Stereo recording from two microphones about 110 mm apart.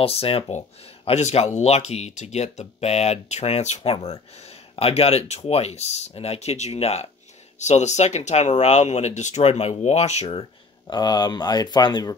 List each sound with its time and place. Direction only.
0.0 s speech: 60° left (ahead or behind); by 7.1 s 80° left
7.5 s speech: 90° left
10.9 s speech: 40° left (ahead or behind)